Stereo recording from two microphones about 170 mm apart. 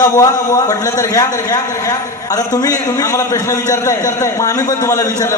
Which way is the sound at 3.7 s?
20° left (ahead or behind).